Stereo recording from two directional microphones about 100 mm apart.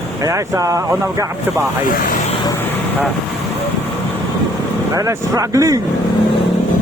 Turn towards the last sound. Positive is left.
turn(degrees=-35)  # may be behind; listen again after turning